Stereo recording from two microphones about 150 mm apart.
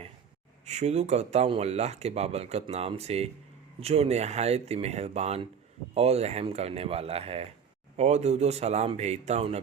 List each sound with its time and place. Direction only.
0.6 s speech: 50° right (ahead or behind)